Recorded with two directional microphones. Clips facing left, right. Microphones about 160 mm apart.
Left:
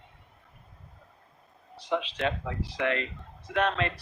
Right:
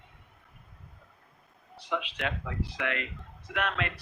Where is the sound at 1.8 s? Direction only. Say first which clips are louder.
Left 4 dB; 35° left (ahead or behind).